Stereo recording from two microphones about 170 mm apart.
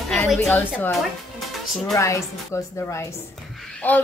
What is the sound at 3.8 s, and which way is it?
Speech, 10° left (ahead or behind).